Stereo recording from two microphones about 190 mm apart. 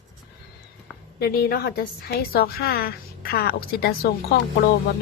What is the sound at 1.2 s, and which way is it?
A woman's voice, 55° left (ahead or behind).